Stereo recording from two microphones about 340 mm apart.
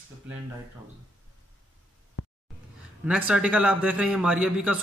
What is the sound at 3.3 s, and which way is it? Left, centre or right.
A man's voice, centre.